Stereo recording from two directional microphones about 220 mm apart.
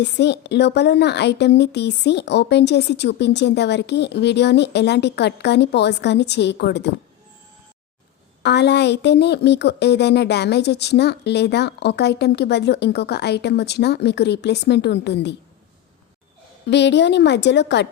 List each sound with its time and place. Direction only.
0.0 s a woman's voice: 50° left (ahead or behind)
8.4 s a woman's voice: 50° left (ahead or behind)
16.6 s a woman's voice: 50° left (ahead or behind)